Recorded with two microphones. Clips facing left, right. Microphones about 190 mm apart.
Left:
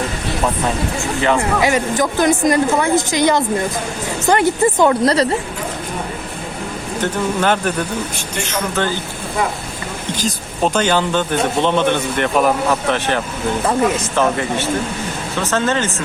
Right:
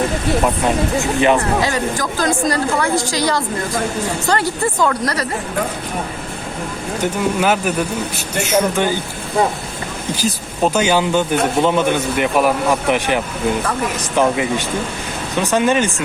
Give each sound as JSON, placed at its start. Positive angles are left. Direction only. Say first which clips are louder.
{"t": 0.9, "sound": "speech", "louder": "right 3 dB", "side_deg": -20}
{"t": 1.6, "sound": "speech", "louder": "left 3 dB", "side_deg": 20}
{"t": 7.0, "sound": "speech", "louder": "right 1 dB", "side_deg": -10}
{"t": 10.2, "sound": "speech", "louder": "right 1 dB", "side_deg": -10}